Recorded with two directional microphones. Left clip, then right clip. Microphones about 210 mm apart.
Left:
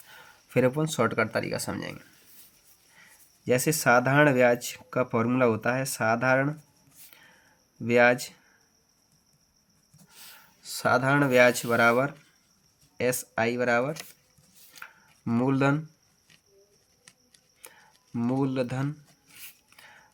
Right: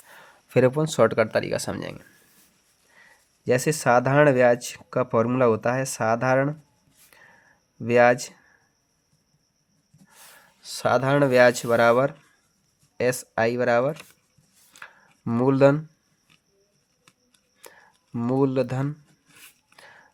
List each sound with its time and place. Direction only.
0.1 s speech: 40° right (ahead or behind)
3.0 s speech: 35° right (ahead or behind)
7.9 s speech: 35° right (ahead or behind)
10.2 s speech: 35° right (ahead or behind)
14.8 s a sound: 40° right (ahead or behind)
18.3 s speech: 45° right (ahead or behind)
19.8 s a sound: 40° right (ahead or behind)